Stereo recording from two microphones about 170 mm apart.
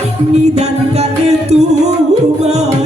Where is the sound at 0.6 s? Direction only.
40° right (ahead or behind).